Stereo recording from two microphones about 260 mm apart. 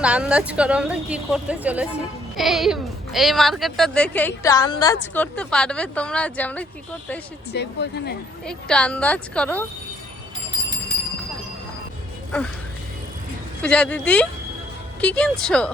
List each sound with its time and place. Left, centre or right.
0.0 s a woman's voice: centre
7.5 s speech: left
8.4 s a woman's voice: centre
13.6 s a woman's voice: centre